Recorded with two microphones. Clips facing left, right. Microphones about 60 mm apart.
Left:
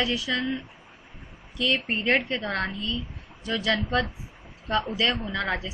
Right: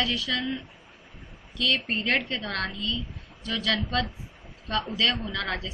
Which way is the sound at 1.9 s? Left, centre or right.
Centre.